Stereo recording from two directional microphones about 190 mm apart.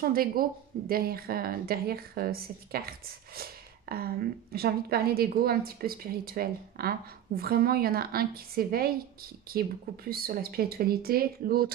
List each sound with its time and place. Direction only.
0.0 s a woman's voice: 50° right (ahead or behind)
3.9 s a woman's voice: 55° right (ahead or behind)